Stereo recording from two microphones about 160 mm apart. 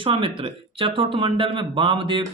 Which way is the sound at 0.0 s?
35° right (ahead or behind).